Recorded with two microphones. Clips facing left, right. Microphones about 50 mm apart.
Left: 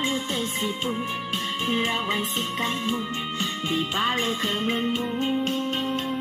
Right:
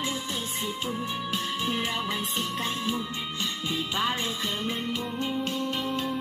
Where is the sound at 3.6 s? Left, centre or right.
Left.